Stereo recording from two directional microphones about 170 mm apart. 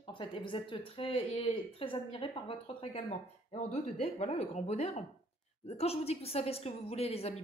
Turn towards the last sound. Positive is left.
turn(degrees=35)  # may be behind; listen again after turning